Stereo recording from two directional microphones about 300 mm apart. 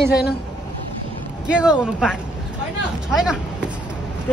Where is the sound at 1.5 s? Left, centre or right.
Centre.